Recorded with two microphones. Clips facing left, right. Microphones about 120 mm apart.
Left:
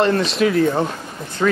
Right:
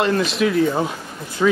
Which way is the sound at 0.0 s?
Centre (ahead or behind).